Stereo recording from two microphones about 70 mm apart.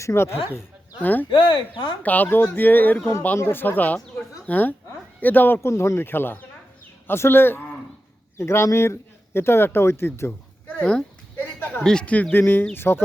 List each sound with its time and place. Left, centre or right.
0.0 s speech: left
1.0 s a woman's voice: left
5.6 s speech: left
6.1 s speech: left
10.7 s dog: centre
11.3 s a sound: left
11.8 s speech: centre
12.0 s speech: left